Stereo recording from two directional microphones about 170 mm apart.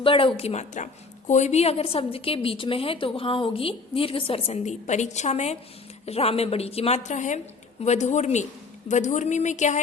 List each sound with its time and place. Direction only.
0.0 s a woman's voice: 30° left (ahead or behind)